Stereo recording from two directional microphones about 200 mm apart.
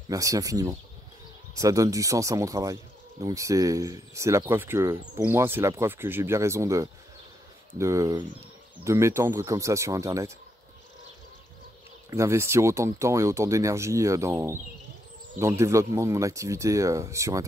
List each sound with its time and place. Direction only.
0.1 s speech: 15° right (ahead or behind)
12.1 s speech: 15° right (ahead or behind)